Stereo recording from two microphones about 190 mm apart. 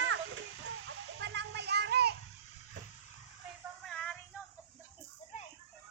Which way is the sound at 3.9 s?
5° left (ahead or behind).